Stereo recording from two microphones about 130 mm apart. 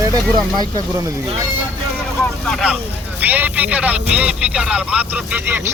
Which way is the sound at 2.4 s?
5° left (ahead or behind).